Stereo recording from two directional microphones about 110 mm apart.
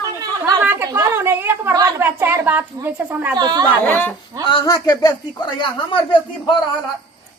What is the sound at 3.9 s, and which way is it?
Speech, 15° left (ahead or behind).